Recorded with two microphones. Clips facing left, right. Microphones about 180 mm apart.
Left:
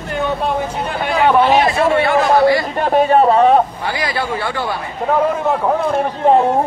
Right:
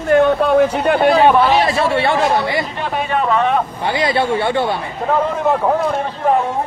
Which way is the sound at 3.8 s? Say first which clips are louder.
Right 4 dB; 25° right (ahead or behind).